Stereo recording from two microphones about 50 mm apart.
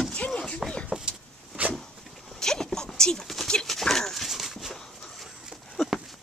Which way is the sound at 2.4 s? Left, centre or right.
Centre.